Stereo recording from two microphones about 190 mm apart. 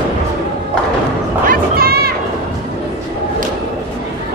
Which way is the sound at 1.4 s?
50° right (ahead or behind).